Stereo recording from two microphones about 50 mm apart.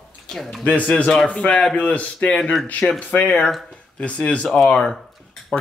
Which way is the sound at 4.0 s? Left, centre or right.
Left.